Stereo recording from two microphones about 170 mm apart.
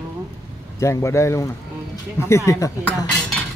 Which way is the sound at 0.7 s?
15° left (ahead or behind).